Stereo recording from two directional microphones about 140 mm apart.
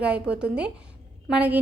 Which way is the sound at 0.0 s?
5° right (ahead or behind).